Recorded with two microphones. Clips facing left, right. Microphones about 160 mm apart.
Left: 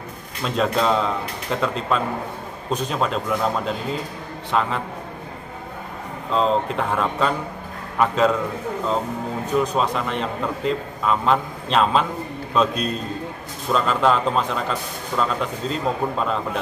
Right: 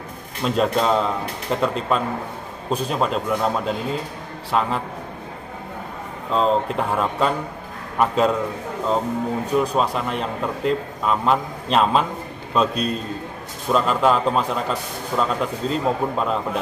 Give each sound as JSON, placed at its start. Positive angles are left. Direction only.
{"t": 0.4, "sound": "a man's voice", "side_deg": -5}
{"t": 6.3, "sound": "a man's voice", "side_deg": 0}
{"t": 9.6, "sound": "a man's voice", "side_deg": -5}